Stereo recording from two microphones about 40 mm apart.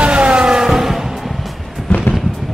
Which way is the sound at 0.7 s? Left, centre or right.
Centre.